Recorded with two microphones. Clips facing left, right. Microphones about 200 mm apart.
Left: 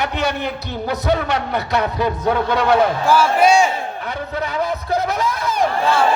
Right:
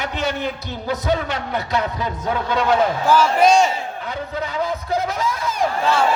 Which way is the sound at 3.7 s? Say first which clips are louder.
Left 2 dB; 65° left (ahead or behind).